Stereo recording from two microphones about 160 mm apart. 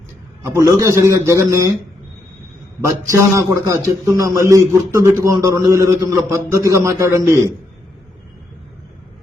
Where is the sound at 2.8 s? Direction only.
20° right (ahead or behind).